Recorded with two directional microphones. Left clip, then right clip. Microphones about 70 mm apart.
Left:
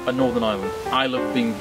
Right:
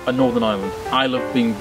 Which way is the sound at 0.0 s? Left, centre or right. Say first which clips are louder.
Right 3 dB; centre.